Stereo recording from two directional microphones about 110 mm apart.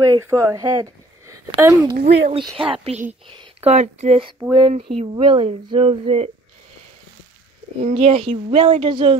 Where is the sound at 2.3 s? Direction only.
55° right (ahead or behind).